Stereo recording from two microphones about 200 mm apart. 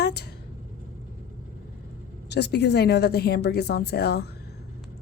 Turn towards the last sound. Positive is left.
turn(degrees=55)  # may be behind; listen again after turning